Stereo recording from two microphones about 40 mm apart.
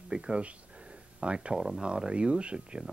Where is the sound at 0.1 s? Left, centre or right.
Right.